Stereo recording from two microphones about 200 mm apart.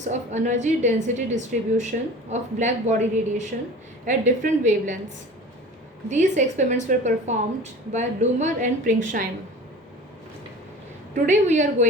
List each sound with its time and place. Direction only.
0.0 s a woman's voice: 35° right (ahead or behind)
6.1 s a woman's voice: 35° right (ahead or behind)
11.1 s a woman's voice: 35° right (ahead or behind)